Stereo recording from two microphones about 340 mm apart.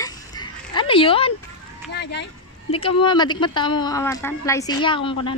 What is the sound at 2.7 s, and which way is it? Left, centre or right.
Speech, centre.